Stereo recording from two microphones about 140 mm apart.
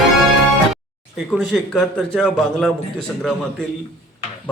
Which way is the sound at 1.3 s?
5° left (ahead or behind).